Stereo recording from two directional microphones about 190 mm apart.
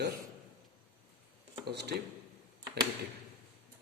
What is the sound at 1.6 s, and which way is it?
Speech, 60° right (ahead or behind).